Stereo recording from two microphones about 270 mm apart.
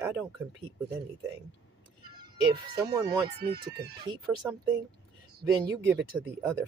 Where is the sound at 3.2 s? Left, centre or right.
Right.